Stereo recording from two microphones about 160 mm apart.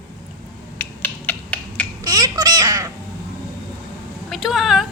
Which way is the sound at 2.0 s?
25° right (ahead or behind).